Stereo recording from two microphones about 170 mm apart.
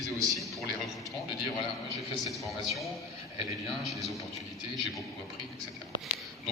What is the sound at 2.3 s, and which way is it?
Speech, centre (ahead or behind).